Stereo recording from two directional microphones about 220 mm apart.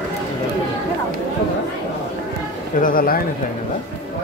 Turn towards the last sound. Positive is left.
turn(degrees=40)  # may be behind; listen again after turning